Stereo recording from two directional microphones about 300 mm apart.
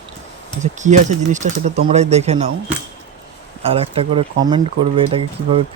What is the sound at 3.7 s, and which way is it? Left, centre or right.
Speech, centre.